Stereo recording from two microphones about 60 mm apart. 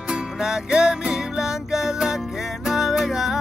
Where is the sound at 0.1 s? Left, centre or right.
Centre.